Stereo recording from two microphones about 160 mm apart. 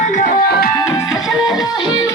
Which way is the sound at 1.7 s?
30° left (ahead or behind).